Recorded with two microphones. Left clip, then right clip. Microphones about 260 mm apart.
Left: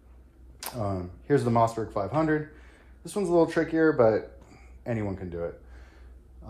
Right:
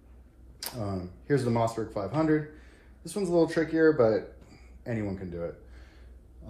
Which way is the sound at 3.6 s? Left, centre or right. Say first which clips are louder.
Left 2 dB; left.